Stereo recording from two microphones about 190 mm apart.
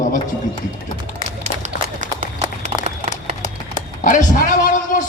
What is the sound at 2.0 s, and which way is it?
Run, 40° right (ahead or behind).